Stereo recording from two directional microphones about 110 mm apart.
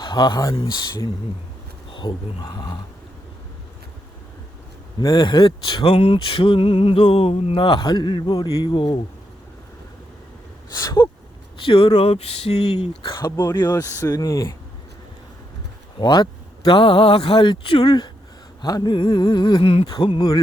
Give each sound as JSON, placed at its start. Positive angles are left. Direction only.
{"t": 0.0, "sound": "speech", "side_deg": 45}
{"t": 0.5, "sound": "speech", "side_deg": 50}
{"t": 4.9, "sound": "speech", "side_deg": 40}
{"t": 11.6, "sound": "speech", "side_deg": 55}
{"t": 13.2, "sound": "speech", "side_deg": 40}
{"t": 16.0, "sound": "speech", "side_deg": 40}
{"t": 19.6, "sound": "a sound", "side_deg": 65}
{"t": 20.0, "sound": "speech", "side_deg": 45}